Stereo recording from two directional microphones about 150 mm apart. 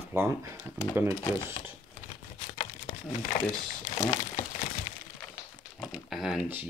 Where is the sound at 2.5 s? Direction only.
45° left (ahead or behind).